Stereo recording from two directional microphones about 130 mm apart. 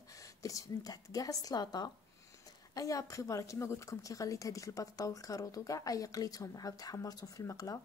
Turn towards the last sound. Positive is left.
turn(degrees=25)  # may be behind; listen again after turning